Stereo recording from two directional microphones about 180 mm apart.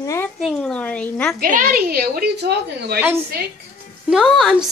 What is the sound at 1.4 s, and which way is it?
A woman's voice, 50° right (ahead or behind).